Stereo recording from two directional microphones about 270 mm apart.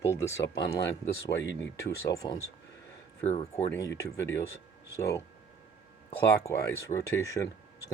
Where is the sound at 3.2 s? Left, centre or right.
Left.